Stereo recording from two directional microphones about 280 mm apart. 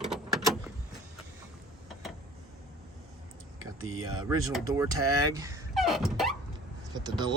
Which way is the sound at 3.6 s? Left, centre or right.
Right.